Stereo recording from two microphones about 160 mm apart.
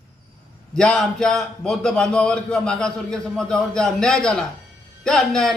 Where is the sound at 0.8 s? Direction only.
5° left (ahead or behind).